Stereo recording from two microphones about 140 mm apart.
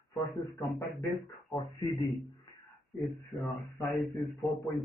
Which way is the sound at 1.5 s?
Centre (ahead or behind).